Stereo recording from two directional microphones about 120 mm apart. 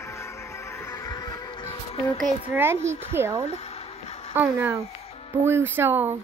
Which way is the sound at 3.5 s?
60° left (ahead or behind).